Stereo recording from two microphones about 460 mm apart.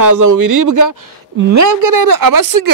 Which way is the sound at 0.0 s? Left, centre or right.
Right.